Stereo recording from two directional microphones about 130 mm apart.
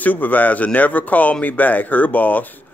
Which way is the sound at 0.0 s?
15° left (ahead or behind).